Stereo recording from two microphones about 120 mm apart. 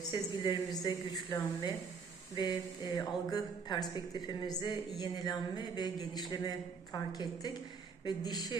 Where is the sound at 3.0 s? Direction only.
30° left (ahead or behind).